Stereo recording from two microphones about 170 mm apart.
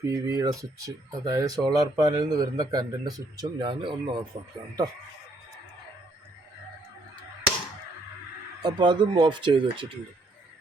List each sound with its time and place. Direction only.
0.0 s speech: 20° right (ahead or behind)
8.6 s speech: 25° right (ahead or behind)